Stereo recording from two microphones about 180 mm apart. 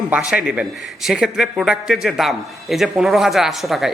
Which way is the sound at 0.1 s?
5° right (ahead or behind).